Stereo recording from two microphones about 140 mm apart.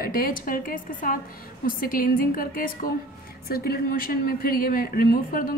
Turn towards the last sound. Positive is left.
turn(degrees=90)